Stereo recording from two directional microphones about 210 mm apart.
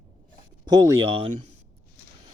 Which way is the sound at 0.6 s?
20° right (ahead or behind).